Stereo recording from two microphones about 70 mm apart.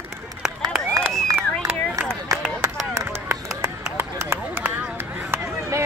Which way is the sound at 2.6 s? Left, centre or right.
Right.